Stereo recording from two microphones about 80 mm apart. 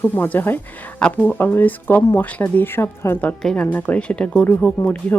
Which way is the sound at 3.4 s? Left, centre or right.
Centre.